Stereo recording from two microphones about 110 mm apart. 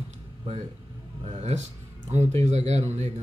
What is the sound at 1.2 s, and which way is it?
Speech, 80° right.